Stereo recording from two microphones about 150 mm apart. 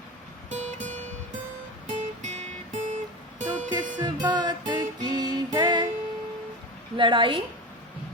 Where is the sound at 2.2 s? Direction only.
50° right (ahead or behind).